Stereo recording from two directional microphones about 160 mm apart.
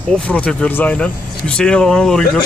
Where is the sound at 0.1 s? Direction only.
5° left (ahead or behind).